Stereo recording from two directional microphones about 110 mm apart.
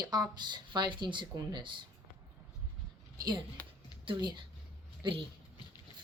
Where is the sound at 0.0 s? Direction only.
40° right (ahead or behind).